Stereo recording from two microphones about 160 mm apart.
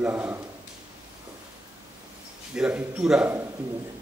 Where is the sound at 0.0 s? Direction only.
10° right (ahead or behind).